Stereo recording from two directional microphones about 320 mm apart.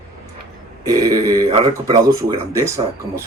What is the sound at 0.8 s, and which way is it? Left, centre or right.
Speech, centre.